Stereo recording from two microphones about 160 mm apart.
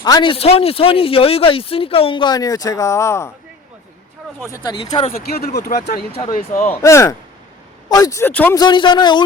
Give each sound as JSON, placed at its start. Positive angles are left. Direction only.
{"t": 0.0, "sound": "speech", "side_deg": 30}
{"t": 4.5, "sound": "a man's voice", "side_deg": 25}
{"t": 5.1, "sound": "speech", "side_deg": 75}
{"t": 6.3, "sound": "speech", "side_deg": 55}
{"t": 6.7, "sound": "speech", "side_deg": 15}
{"t": 8.5, "sound": "a man's voice", "side_deg": 30}